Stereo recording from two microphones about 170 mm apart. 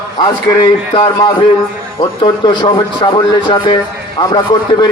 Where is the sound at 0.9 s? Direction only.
25° left (ahead or behind).